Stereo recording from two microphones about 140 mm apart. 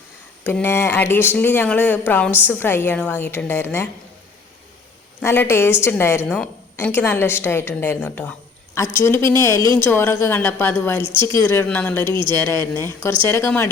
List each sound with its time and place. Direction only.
0.4 s a woman's voice: 15° left (ahead or behind)
5.2 s a woman's voice: 15° left (ahead or behind)
11.1 s speech: 35° right (ahead or behind)
11.3 s a woman's voice: 15° left (ahead or behind)